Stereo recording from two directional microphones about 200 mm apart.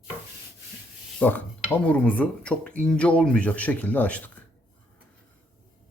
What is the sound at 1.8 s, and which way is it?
Speech, 5° left (ahead or behind).